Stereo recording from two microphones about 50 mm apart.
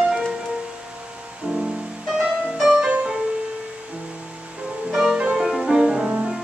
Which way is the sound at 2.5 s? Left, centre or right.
Centre.